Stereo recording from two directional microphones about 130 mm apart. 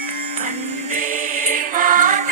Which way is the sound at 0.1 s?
75° right (ahead or behind).